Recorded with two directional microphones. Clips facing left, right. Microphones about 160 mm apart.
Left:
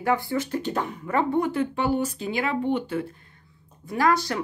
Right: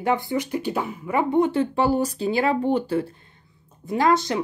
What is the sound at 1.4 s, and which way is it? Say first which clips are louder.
Speech: right 4 dB; 30° right (ahead or behind).